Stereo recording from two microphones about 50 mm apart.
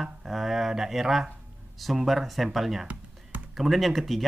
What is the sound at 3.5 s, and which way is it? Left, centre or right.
Speech, centre.